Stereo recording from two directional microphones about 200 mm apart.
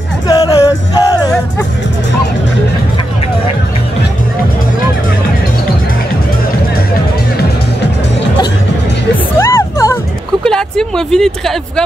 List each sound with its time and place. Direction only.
0.3 s music: 20° left (ahead or behind)
9.4 s music: 15° left (ahead or behind)
10.4 s a sound: 5° left (ahead or behind)